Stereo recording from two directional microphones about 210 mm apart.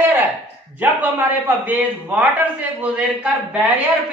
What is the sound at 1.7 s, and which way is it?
A woman's voice, 5° right (ahead or behind).